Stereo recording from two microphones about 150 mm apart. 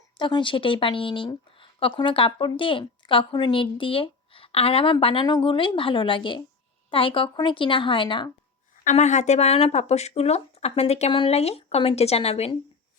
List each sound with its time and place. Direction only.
0.2 s a woman's voice: 30° left (ahead or behind)
8.7 s speech: 60° left (ahead or behind); by 12.5 s 40° left (ahead or behind)